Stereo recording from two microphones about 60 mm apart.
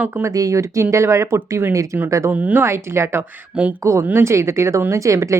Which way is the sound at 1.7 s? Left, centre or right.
Right.